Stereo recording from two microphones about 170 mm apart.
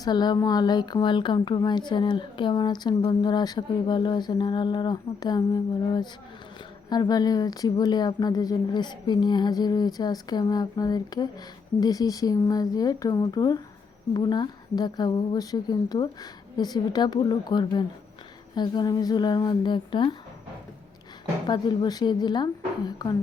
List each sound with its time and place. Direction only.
0.0 s speech: 25° left (ahead or behind)
21.4 s speech: 25° left (ahead or behind)